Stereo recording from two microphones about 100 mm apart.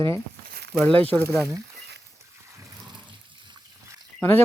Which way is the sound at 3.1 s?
50° right (ahead or behind).